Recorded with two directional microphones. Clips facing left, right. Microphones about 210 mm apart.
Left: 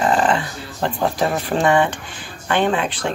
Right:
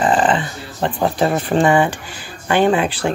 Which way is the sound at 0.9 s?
20° right (ahead or behind).